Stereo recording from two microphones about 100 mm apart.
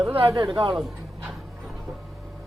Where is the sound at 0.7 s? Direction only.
Centre (ahead or behind).